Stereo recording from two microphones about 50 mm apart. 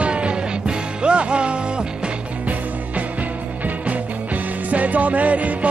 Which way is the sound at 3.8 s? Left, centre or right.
Right.